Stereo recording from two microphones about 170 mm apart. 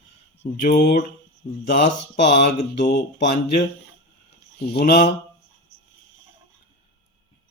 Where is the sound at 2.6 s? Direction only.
90° left.